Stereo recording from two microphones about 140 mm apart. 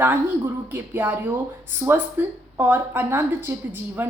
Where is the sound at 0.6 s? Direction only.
15° right (ahead or behind).